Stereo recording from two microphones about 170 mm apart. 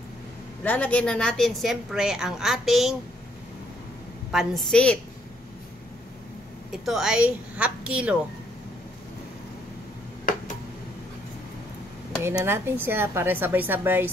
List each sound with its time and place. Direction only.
0.7 s a woman's voice: 10° left (ahead or behind)
4.3 s a woman's voice: centre (ahead or behind)
6.7 s a woman's voice: centre (ahead or behind)
12.2 s a woman's voice: 15° right (ahead or behind)